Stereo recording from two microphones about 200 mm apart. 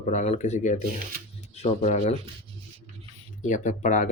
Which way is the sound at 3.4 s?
40° left (ahead or behind).